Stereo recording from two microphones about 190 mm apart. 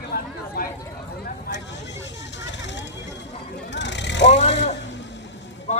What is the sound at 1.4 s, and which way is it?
Vehicle, 65° left (ahead or behind).